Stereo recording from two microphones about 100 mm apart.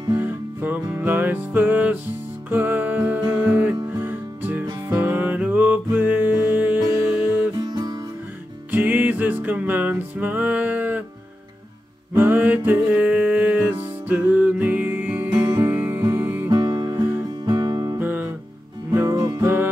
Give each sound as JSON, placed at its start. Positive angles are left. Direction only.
{"t": 0.1, "sound": "music", "side_deg": -20}
{"t": 7.5, "sound": "music", "side_deg": -45}
{"t": 8.7, "sound": "music", "side_deg": -20}
{"t": 12.1, "sound": "music", "side_deg": -20}
{"t": 16.4, "sound": "music", "side_deg": -45}
{"t": 16.9, "sound": "music", "side_deg": -30}
{"t": 17.5, "sound": "music", "side_deg": -45}
{"t": 17.9, "sound": "music", "side_deg": -20}
{"t": 19.0, "sound": "music", "side_deg": -35}
{"t": 19.4, "sound": "music", "side_deg": -20}